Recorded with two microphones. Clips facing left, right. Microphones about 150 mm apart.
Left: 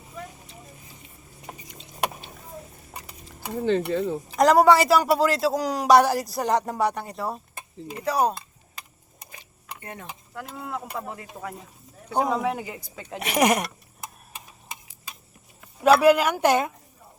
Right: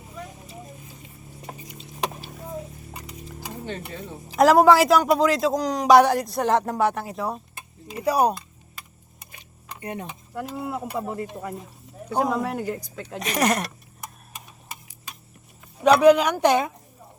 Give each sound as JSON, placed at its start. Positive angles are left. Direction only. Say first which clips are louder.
{"t": 3.7, "sound": "speech", "louder": "left 14 dB", "side_deg": 80}
{"t": 4.4, "sound": "speech", "louder": "right 2 dB", "side_deg": 0}
{"t": 8.0, "sound": "speech", "louder": "right 3 dB", "side_deg": -10}
{"t": 9.8, "sound": "speech", "louder": "right 8 dB", "side_deg": -20}
{"t": 10.3, "sound": "speech", "louder": "right 4 dB", "side_deg": -5}
{"t": 15.8, "sound": "speech", "louder": "right 2 dB", "side_deg": 5}